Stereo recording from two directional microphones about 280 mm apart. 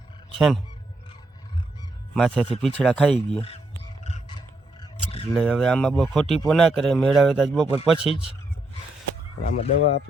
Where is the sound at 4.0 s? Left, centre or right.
Left.